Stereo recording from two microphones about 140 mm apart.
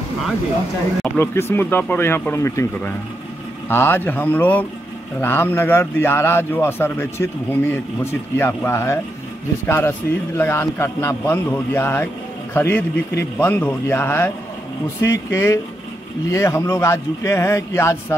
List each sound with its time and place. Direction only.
1.0 s a man's voice: 15° left (ahead or behind)